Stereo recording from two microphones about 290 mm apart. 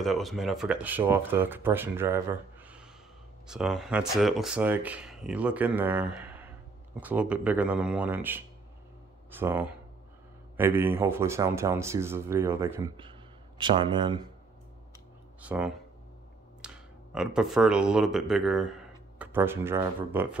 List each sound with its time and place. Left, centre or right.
0.0 s speech: centre
6.1 s a sound: centre
7.0 s speech: centre
15.4 s speech: centre